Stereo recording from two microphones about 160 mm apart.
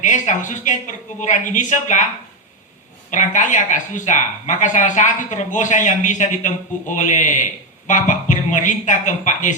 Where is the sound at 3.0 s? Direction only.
50° left (ahead or behind).